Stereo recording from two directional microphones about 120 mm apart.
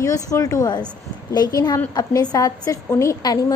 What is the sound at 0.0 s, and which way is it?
A woman's voice, 30° left (ahead or behind).